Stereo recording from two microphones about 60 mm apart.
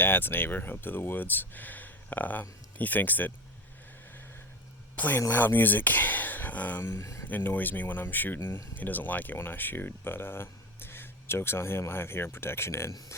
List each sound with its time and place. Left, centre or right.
0.0 s speech: left
4.9 s speech: left
6.8 s speech: left
7.3 s speech: left